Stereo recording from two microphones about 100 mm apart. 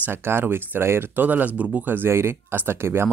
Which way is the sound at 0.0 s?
25° right (ahead or behind).